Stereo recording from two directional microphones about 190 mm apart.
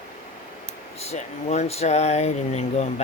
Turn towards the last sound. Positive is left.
turn(degrees=35)  # may be behind; listen again after turning